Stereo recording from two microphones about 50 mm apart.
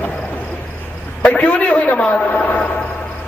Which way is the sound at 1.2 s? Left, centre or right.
Left.